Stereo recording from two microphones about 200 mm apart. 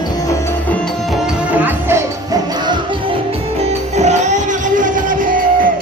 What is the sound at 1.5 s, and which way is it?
Music, 10° right (ahead or behind).